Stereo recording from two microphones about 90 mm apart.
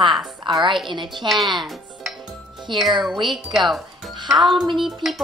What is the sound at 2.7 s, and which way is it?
Speech, 65° right (ahead or behind).